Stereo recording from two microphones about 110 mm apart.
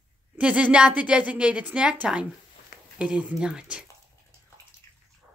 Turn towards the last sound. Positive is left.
turn(degrees=25)  # may be behind; listen again after turning